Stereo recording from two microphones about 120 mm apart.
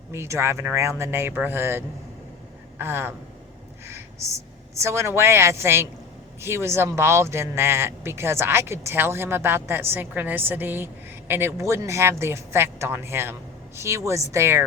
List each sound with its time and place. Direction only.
0.1 s speech: 20° right (ahead or behind)
3.8 s a sound: 20° right (ahead or behind)
4.7 s speech: 25° right (ahead or behind)